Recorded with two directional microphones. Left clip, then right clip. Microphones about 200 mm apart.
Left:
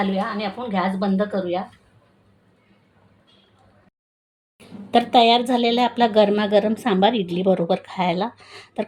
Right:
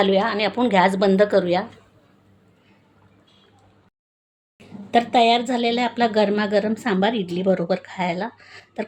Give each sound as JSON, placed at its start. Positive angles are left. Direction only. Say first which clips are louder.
{"t": 0.0, "sound": "a woman's voice", "louder": "right 5 dB", "side_deg": -60}
{"t": 4.6, "sound": "a woman's voice", "louder": "even", "side_deg": 5}